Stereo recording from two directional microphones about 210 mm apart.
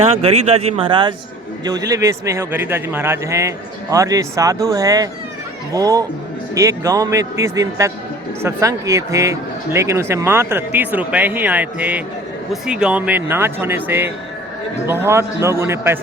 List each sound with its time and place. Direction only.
0.0 s speech: 30° right (ahead or behind); by 16.0 s 10° right (ahead or behind)